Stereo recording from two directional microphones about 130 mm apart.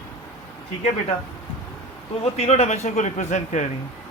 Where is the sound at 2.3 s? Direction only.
55° left (ahead or behind).